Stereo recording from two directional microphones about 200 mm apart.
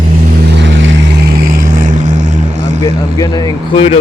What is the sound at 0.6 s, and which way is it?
Vehicle, 65° right (ahead or behind).